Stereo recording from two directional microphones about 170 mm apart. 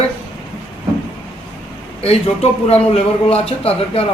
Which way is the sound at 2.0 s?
35° left (ahead or behind).